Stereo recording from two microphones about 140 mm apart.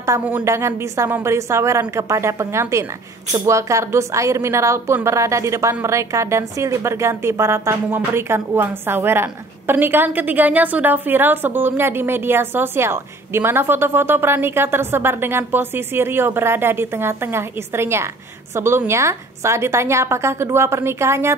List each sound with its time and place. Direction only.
0.4 s a woman's voice: 20° right (ahead or behind)